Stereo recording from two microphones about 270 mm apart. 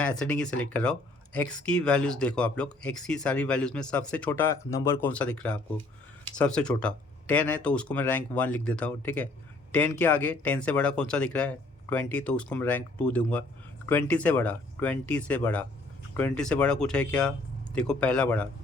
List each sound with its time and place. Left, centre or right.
0.0 s speech: centre